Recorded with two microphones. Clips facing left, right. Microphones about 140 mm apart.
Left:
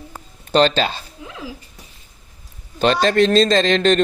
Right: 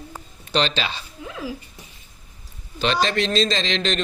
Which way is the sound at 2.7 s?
45° left (ahead or behind).